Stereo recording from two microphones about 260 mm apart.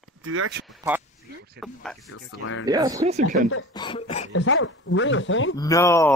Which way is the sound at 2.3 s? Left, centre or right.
Left.